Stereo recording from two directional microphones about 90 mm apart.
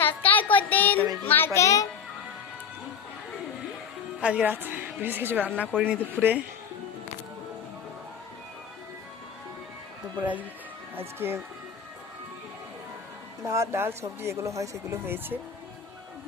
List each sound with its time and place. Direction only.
0.0 s child singing: 20° left (ahead or behind)
1.2 s a child's voice: 20° left (ahead or behind)
1.5 s music: 35° left (ahead or behind)
4.2 s a woman's voice: 15° right (ahead or behind)
10.2 s speech: 15° right (ahead or behind)
11.2 s speech: 30° right (ahead or behind)
13.5 s speech: 30° right (ahead or behind)